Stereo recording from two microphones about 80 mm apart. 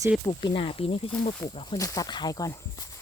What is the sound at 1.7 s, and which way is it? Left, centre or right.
Speech, left.